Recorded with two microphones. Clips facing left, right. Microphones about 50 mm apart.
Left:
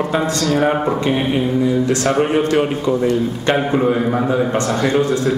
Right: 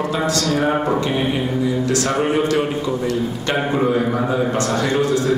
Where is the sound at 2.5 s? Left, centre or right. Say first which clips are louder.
Left 3 dB; left.